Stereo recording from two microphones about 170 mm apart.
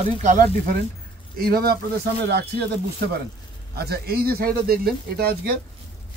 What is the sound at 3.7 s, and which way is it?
Speech, 65° right (ahead or behind).